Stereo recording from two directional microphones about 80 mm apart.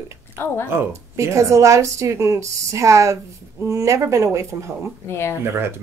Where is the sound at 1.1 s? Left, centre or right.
Right.